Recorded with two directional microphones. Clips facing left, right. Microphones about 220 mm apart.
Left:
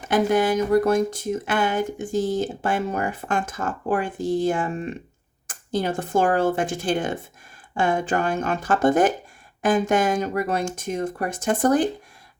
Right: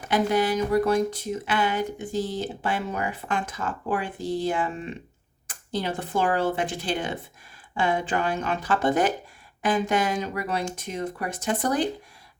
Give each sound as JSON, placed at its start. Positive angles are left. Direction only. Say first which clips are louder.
{"t": 0.1, "sound": "speech", "louder": "left 3 dB", "side_deg": 50}